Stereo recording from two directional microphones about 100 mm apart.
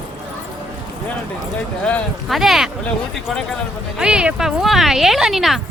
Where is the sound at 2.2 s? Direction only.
Centre (ahead or behind).